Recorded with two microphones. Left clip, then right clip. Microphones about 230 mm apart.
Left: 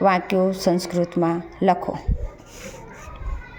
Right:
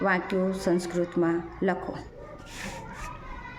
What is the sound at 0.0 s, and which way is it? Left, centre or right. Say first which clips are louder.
A woman's voice: left 8 dB; left.